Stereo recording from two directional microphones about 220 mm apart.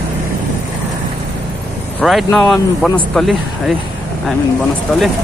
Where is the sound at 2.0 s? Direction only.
Centre (ahead or behind).